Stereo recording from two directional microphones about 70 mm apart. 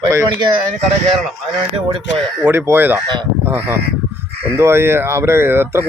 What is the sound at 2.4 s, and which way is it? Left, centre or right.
Speech, right.